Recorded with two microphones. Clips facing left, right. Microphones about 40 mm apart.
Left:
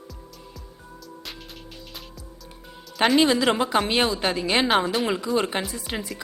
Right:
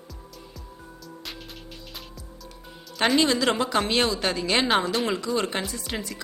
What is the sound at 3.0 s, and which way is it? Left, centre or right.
A woman's voice, centre.